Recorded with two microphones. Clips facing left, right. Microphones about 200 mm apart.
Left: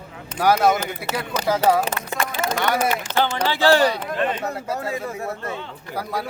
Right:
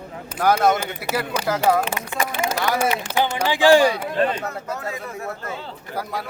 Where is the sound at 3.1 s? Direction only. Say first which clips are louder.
Even; 10° right (ahead or behind).